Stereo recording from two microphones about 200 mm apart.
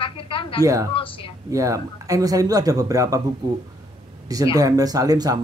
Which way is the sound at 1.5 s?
15° right (ahead or behind).